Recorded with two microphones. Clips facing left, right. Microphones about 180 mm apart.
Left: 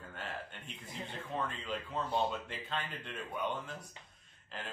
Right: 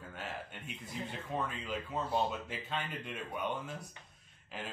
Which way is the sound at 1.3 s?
10° right (ahead or behind).